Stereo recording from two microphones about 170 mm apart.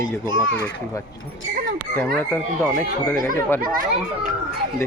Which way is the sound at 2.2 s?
5° left (ahead or behind).